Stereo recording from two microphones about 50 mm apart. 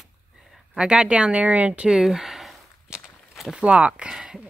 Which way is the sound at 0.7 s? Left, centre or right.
Centre.